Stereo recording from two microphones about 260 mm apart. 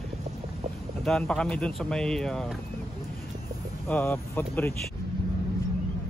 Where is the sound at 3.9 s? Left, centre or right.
Centre.